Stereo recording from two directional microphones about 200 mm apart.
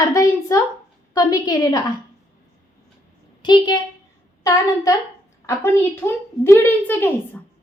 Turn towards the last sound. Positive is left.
turn(degrees=10)  # may be behind; listen again after turning